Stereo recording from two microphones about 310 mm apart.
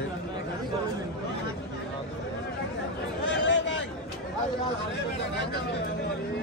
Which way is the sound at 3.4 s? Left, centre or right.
Left.